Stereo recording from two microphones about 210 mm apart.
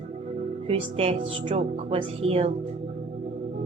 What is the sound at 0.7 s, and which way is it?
Speech, 25° right (ahead or behind).